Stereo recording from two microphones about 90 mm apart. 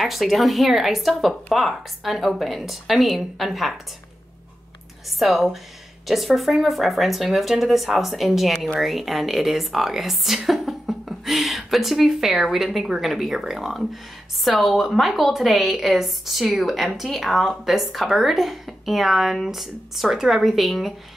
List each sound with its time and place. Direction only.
0.0 s a woman's voice: centre (ahead or behind)
5.2 s a woman's voice: centre (ahead or behind)